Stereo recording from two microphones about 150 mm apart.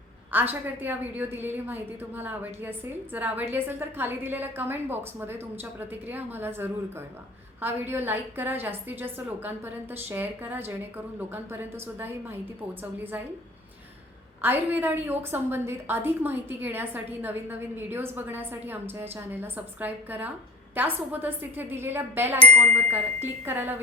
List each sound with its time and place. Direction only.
0.3 s a woman's voice: 15° right (ahead or behind)
14.4 s a woman's voice: 15° right (ahead or behind)
22.5 s speech: 50° right (ahead or behind)
22.9 s a woman's voice: 15° right (ahead or behind)